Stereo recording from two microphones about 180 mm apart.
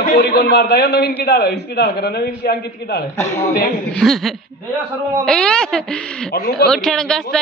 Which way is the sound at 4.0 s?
Centre (ahead or behind).